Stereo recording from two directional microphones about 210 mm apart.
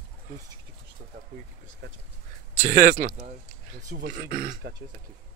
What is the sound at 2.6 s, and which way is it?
Speech, 45° right (ahead or behind).